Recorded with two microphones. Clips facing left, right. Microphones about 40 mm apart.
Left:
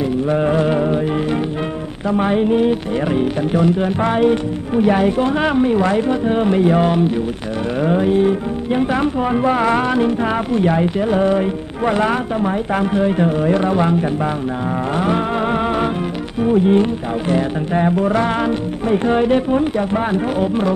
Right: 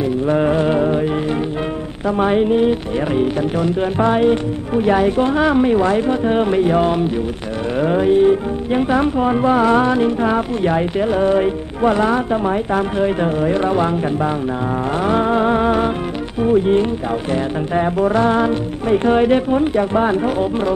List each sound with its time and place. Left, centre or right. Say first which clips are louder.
0.3 s music: right 1 dB; centre
2.1 s a sound: right 1 dB; centre
4.1 s speech: even; centre
5.6 s a sound: right 1 dB; centre
5.9 s speech: even; centre
7.8 s speech: right 2 dB; centre
11.1 s speech: even; centre
11.8 s speech: right 2 dB; centre
12.9 s speech: left 1 dB; centre
15.1 s speech: right 3 dB; centre
18.4 s speech: right 1 dB; centre
20.3 s speech: left 1 dB; centre